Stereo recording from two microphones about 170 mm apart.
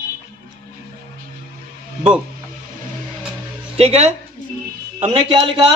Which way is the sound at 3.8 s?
40° right (ahead or behind).